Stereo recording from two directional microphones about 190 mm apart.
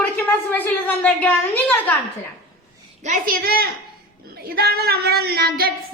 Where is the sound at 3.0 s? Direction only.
45° right (ahead or behind).